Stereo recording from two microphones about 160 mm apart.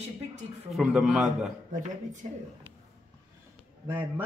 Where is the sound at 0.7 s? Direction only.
Centre (ahead or behind).